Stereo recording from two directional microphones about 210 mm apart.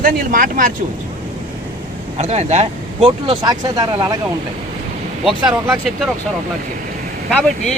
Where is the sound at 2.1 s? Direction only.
30° right (ahead or behind).